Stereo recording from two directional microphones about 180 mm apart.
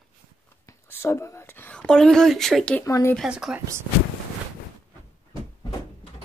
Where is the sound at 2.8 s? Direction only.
15° left (ahead or behind).